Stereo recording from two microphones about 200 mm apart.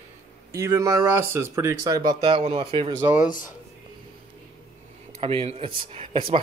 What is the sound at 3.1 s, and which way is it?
Speech, 40° left (ahead or behind).